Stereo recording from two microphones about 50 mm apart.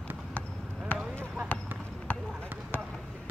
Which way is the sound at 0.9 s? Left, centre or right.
Left.